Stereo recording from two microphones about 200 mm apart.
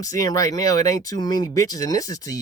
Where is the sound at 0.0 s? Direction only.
15° left (ahead or behind).